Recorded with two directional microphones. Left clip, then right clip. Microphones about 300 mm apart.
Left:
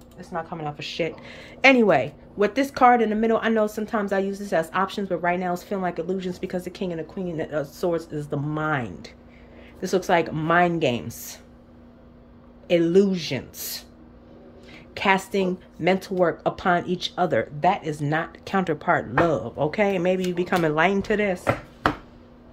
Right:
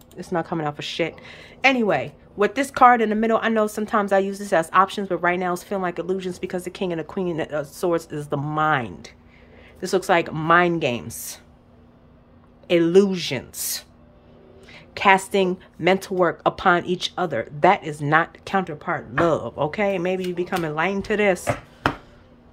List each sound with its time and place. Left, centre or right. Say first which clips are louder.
0.2 s speech: right 6 dB; right; by 11.3 s centre
12.6 s speech: right 2 dB; centre